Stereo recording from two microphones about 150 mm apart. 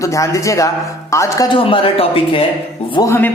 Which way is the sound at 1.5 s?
35° left (ahead or behind).